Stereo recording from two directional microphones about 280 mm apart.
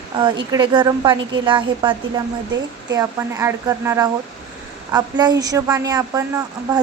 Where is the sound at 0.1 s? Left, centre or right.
Centre.